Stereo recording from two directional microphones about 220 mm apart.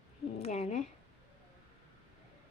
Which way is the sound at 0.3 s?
30° left (ahead or behind).